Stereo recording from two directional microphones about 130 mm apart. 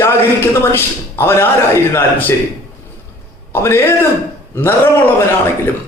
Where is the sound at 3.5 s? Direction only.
20° left (ahead or behind).